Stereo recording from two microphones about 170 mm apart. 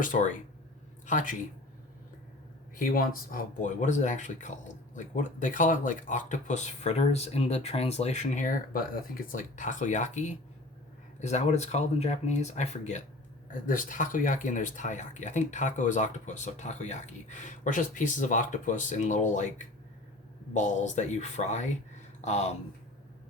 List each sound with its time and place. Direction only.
0.0 s speech: 50° left (ahead or behind)
2.7 s speech: 55° left (ahead or behind)
20.5 s speech: 45° left (ahead or behind)